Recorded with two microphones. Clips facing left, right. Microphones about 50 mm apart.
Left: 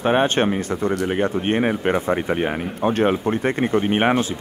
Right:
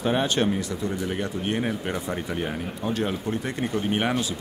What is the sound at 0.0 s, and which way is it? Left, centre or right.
Speech, left.